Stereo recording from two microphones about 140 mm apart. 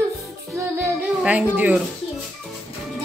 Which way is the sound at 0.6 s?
15° right (ahead or behind).